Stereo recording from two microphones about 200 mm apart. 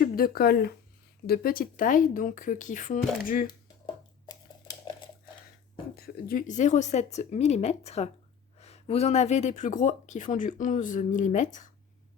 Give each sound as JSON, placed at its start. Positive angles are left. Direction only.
{"t": 0.0, "sound": "speech", "side_deg": 50}
{"t": 4.3, "sound": "a sound", "side_deg": 20}
{"t": 6.0, "sound": "speech", "side_deg": 45}